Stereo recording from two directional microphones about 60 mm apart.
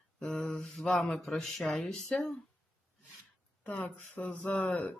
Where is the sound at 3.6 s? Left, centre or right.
Left.